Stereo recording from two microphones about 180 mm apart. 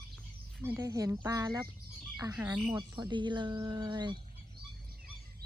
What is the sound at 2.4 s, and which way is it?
Speech, 10° right (ahead or behind).